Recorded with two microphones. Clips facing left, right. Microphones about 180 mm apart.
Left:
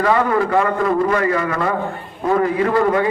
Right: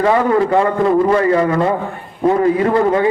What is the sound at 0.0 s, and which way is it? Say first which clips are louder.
A man's voice: right 3 dB; 25° right (ahead or behind).